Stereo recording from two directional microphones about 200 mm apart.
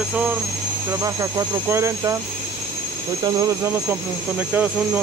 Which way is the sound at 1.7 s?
15° right (ahead or behind).